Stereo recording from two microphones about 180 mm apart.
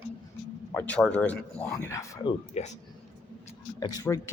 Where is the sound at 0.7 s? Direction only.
10° left (ahead or behind).